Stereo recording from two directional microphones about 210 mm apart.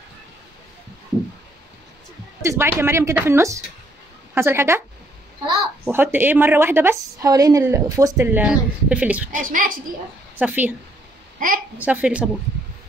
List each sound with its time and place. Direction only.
2.4 s a woman's voice: 10° right (ahead or behind)
5.9 s a woman's voice: 10° right (ahead or behind)
9.3 s a woman's voice: 40° right (ahead or behind)
10.3 s a woman's voice: 10° right (ahead or behind)
11.3 s a child's voice: 40° right (ahead or behind)
11.8 s a woman's voice: 5° right (ahead or behind)